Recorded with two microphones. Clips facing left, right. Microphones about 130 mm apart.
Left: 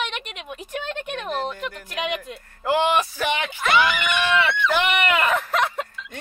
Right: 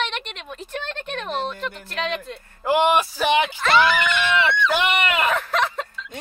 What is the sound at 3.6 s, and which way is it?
Speech, 15° left (ahead or behind).